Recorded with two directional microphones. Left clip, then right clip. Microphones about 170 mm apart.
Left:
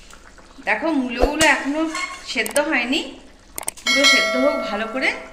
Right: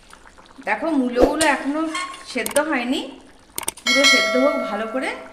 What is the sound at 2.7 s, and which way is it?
Speech, 60° right (ahead or behind).